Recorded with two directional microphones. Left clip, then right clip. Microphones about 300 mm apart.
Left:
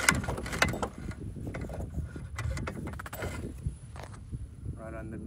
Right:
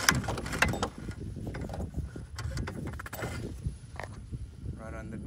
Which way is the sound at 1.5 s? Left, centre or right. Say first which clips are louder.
Even; centre.